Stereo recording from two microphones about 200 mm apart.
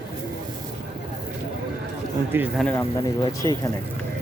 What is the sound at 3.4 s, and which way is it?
Speech, 20° left (ahead or behind).